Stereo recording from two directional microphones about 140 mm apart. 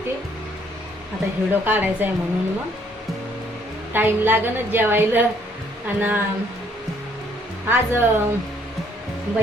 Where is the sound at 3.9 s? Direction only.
15° right (ahead or behind).